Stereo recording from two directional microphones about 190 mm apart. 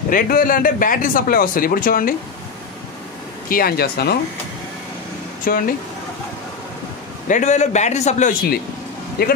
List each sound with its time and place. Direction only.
0.1 s speech: 45° left (ahead or behind)
3.4 s speech: 50° left (ahead or behind)
5.5 s speech: 50° left (ahead or behind)
7.2 s a man's voice: 40° left (ahead or behind)
9.2 s speech: 55° left (ahead or behind)